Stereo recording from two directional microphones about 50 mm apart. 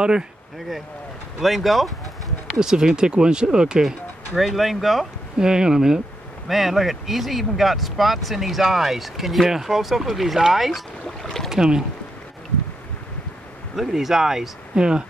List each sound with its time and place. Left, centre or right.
1.4 s speech: centre
2.6 s speech: centre
4.4 s speech: centre
5.4 s speech: centre
6.4 s speech: centre
13.7 s speech: centre